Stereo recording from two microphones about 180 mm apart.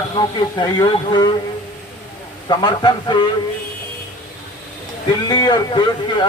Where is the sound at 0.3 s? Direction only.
25° left (ahead or behind).